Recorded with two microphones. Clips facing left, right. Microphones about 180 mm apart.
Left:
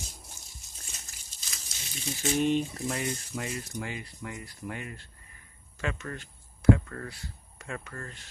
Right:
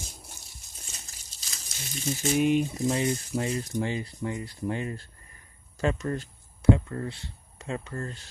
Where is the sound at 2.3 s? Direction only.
10° right (ahead or behind).